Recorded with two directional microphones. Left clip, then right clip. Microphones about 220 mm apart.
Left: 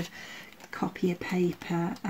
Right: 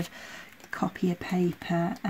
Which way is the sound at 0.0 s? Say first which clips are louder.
Right 1 dB; 30° right (ahead or behind).